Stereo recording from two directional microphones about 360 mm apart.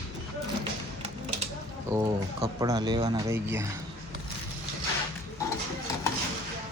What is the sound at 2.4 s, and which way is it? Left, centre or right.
Speech, centre.